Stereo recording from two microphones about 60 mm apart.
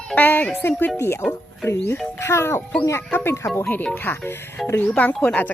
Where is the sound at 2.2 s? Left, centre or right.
Left.